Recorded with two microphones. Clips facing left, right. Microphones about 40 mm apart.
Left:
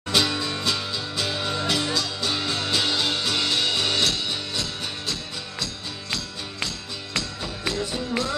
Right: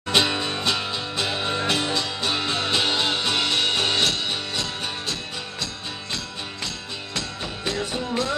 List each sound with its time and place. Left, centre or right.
0.1 s music: right
7.7 s music: right